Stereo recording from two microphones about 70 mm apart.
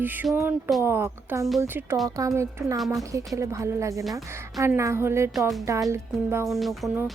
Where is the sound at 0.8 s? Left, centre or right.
Right.